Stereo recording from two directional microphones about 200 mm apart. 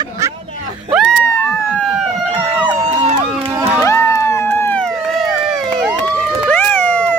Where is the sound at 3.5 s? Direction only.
10° right (ahead or behind).